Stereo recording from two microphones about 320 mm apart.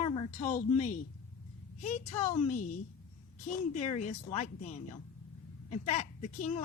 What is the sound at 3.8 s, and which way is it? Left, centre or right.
A woman's voice, left.